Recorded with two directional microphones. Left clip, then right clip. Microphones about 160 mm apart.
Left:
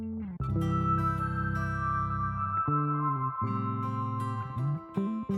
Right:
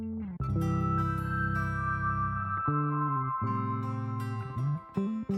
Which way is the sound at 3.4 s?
30° right (ahead or behind).